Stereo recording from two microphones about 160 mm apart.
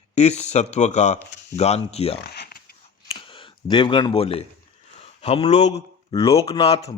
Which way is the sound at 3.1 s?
30° left (ahead or behind).